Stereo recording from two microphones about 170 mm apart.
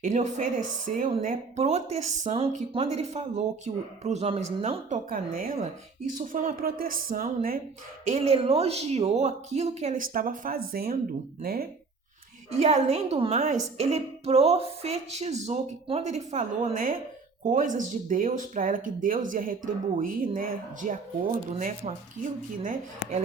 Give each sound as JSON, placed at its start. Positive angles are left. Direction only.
{"t": 0.0, "sound": "a woman's voice", "side_deg": -45}
{"t": 5.0, "sound": "a woman's voice", "side_deg": -55}
{"t": 8.0, "sound": "a woman's voice", "side_deg": -40}
{"t": 12.5, "sound": "a woman's voice", "side_deg": -40}